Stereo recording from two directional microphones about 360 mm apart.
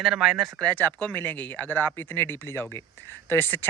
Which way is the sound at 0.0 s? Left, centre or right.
Centre.